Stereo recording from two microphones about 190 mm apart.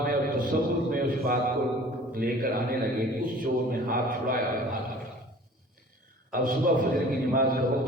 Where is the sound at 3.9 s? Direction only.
50° right (ahead or behind).